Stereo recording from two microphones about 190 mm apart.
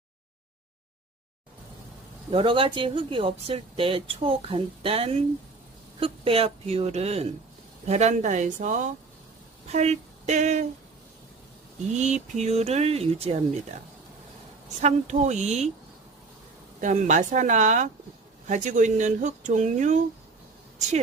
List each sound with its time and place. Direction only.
2.3 s speech: 25° right (ahead or behind)
11.9 s speech: 35° right (ahead or behind)
14.8 s speech: 40° right (ahead or behind)
16.8 s speech: 40° right (ahead or behind)